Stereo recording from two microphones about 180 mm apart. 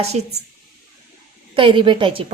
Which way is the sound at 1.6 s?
30° right (ahead or behind).